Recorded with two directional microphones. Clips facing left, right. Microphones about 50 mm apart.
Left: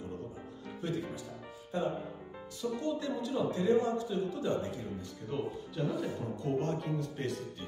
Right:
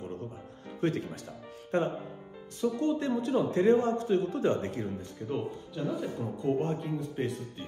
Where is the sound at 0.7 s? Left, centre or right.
Right.